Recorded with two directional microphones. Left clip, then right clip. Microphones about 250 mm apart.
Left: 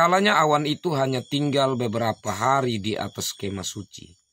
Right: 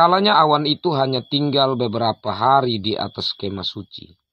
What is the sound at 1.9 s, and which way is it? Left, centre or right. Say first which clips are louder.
Speech: right 5 dB; centre.